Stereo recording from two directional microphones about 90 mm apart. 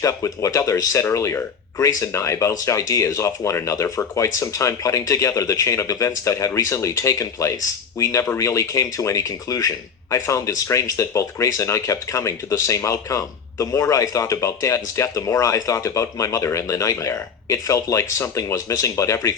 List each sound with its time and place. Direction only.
0.0 s speech: 35° left (ahead or behind)